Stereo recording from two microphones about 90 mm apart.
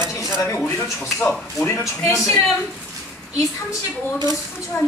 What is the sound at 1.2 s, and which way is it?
Speech, 10° left (ahead or behind).